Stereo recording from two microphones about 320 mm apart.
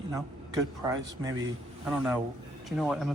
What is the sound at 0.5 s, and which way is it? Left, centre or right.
Speech, centre.